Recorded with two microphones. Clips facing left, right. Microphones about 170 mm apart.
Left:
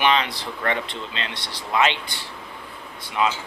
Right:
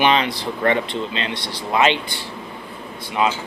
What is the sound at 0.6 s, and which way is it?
Speech, 25° right (ahead or behind).